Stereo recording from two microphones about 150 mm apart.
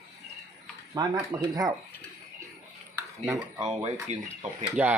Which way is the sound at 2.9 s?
20° right (ahead or behind).